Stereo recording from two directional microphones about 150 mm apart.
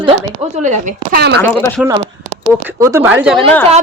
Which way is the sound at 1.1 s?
90° right.